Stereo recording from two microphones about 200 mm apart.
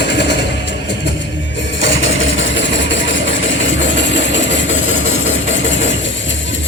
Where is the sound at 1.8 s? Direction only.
70° left (ahead or behind).